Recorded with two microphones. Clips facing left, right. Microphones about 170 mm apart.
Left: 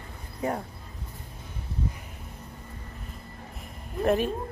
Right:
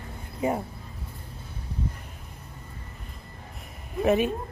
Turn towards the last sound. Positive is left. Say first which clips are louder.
# right 2 dB
turn(degrees=-5)  # may be behind; listen again after turning